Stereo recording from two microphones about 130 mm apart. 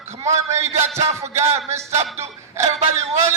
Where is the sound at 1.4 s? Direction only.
20° right (ahead or behind).